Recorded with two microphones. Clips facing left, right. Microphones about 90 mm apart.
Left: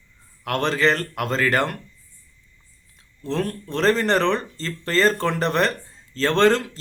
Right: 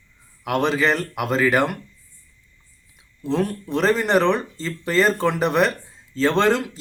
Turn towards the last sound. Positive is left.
turn(degrees=-10)  # may be behind; listen again after turning